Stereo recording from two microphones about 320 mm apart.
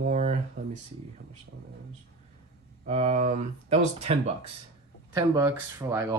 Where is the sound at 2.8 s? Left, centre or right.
Centre.